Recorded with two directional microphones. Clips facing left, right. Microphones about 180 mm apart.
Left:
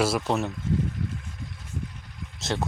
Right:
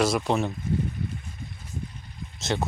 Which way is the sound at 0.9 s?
85° left.